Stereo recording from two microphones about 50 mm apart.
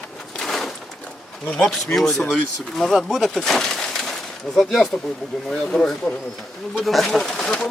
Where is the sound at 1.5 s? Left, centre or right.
Centre.